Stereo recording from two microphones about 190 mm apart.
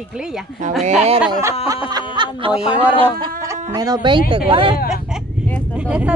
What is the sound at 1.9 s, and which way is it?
Speech, 25° right (ahead or behind).